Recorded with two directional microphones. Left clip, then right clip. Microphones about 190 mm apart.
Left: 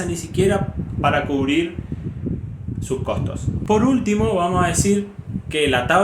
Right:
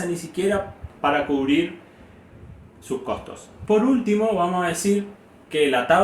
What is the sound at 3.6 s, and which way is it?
Speech, 50° left (ahead or behind).